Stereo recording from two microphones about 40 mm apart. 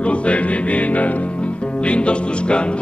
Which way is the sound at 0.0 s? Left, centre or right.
Left.